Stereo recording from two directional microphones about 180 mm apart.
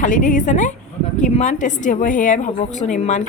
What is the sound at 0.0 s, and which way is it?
A woman's voice, 45° left (ahead or behind).